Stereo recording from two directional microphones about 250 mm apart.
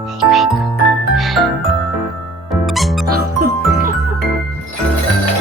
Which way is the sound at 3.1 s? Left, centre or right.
Right.